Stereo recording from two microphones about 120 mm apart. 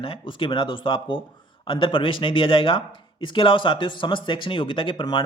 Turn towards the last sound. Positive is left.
turn(degrees=45)  # may be behind; listen again after turning